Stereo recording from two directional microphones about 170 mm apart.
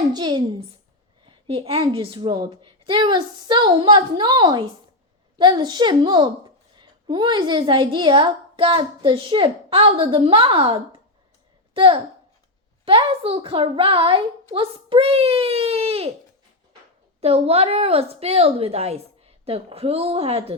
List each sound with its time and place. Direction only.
0.1 s a woman's voice: 25° right (ahead or behind)
1.2 s a sound: 30° right (ahead or behind)
1.8 s a woman's voice: 30° right (ahead or behind)
17.2 s a woman's voice: 35° right (ahead or behind)